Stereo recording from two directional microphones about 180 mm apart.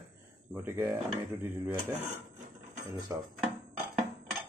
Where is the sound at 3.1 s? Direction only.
15° right (ahead or behind).